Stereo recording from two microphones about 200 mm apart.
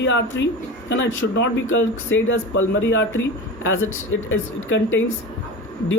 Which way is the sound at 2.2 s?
75° left (ahead or behind).